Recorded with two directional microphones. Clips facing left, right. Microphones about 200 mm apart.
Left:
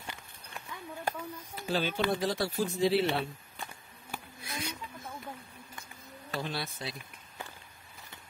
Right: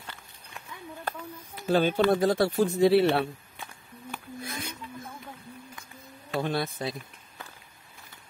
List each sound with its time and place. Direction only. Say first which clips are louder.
1.0 s speech: left 1 dB; 5° left (ahead or behind)
1.7 s speech: right 8 dB; 50° right (ahead or behind)
4.4 s a sound: right 1 dB; 55° right (ahead or behind)
6.4 s speech: right 10 dB; 50° right (ahead or behind)